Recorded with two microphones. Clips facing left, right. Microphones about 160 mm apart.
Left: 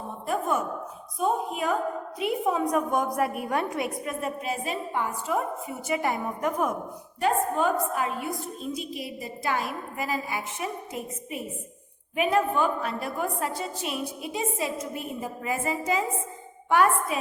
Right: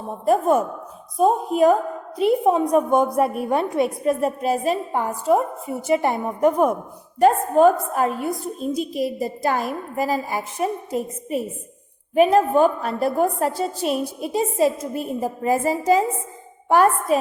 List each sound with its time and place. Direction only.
0.3 s a woman's voice: 35° right (ahead or behind)
7.2 s a woman's voice: 40° right (ahead or behind)